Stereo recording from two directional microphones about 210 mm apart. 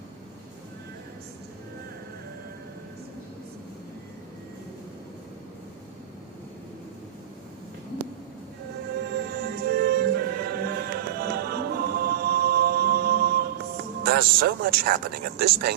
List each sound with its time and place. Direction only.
9.0 s music: 50° right (ahead or behind)
14.0 s speech: 45° right (ahead or behind)